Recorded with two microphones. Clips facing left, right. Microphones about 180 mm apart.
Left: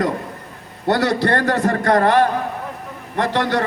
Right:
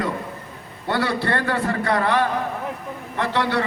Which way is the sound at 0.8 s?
75° left (ahead or behind).